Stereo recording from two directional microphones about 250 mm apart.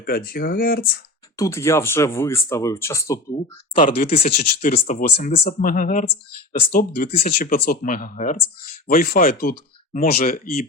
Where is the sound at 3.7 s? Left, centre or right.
Left.